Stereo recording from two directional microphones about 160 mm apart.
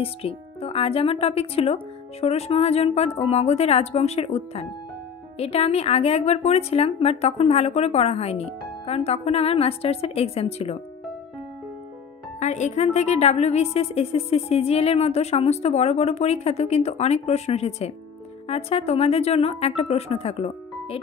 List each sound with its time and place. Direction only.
0.0 s a woman's voice: 35° left (ahead or behind)
12.4 s a woman's voice: 45° left (ahead or behind)